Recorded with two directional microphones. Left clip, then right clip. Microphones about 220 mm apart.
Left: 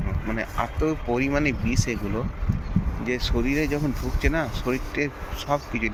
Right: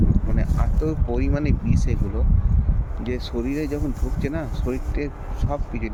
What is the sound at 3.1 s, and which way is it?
Speech, 5° right (ahead or behind).